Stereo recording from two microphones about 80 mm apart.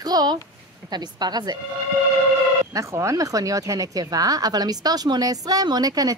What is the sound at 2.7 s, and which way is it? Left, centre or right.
Speech, right.